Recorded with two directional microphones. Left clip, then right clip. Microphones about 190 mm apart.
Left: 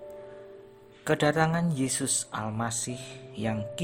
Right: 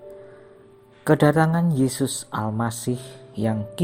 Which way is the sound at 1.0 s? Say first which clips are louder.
Right 6 dB; 10° right (ahead or behind).